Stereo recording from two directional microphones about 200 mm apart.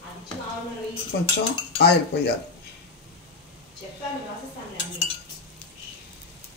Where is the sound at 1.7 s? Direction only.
55° left (ahead or behind).